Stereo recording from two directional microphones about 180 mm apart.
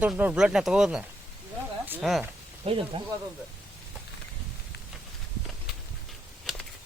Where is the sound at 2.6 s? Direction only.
30° right (ahead or behind).